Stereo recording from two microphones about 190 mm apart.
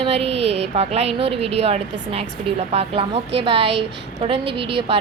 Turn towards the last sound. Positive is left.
turn(degrees=-30)  # may be behind; listen again after turning